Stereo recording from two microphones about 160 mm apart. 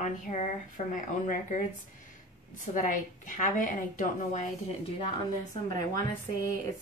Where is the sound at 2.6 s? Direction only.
55° left (ahead or behind).